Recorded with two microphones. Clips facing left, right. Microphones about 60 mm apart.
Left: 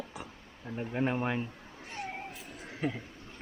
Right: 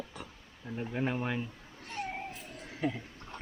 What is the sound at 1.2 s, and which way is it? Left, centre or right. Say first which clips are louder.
Cat: left 2 dB; centre.